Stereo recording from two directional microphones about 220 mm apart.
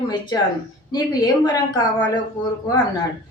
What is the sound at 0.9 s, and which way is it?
A woman's voice, 15° left (ahead or behind).